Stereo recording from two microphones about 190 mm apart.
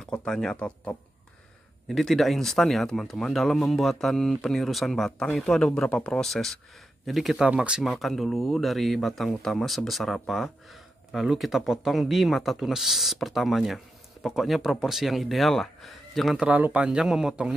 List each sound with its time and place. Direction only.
0.0 s speech: 5° left (ahead or behind)